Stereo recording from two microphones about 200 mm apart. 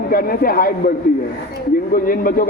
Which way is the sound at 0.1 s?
45° left (ahead or behind).